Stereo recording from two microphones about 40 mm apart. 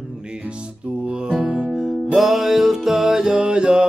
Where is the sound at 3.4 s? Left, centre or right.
Right.